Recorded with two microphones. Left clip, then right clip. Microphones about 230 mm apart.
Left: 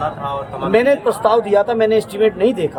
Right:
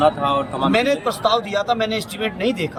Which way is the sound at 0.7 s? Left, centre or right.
Centre.